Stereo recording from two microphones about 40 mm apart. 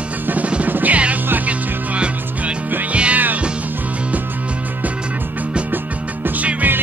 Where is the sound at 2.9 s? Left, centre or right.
Right.